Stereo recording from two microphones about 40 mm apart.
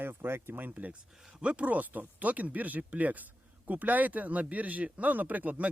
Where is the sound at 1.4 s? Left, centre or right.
Right.